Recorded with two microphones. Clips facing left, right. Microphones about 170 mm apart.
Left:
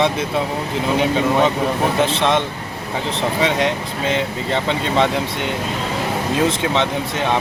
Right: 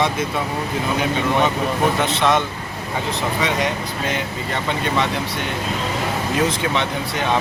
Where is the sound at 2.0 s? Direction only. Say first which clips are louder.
Left 1 dB; 30° left (ahead or behind).